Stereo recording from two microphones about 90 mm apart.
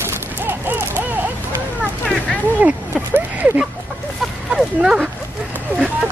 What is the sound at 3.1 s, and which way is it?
Speech, 20° right (ahead or behind).